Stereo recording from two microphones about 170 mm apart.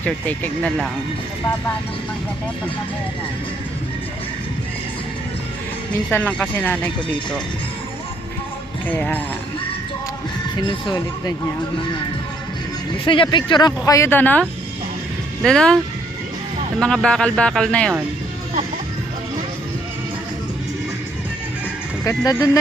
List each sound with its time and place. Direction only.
0.0 s speech: 10° left (ahead or behind)
6.1 s speech: 10° left (ahead or behind)
8.9 s speech: 10° left (ahead or behind)
10.7 s speech: 25° left (ahead or behind)
13.1 s speech: 30° left (ahead or behind); by 14.4 s 10° left (ahead or behind)
15.4 s speech: 5° left (ahead or behind)
16.8 s speech: 5° left (ahead or behind)
22.0 s speech: 20° left (ahead or behind)